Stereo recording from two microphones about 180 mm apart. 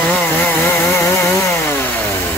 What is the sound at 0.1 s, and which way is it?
Chainsaw, 10° left (ahead or behind).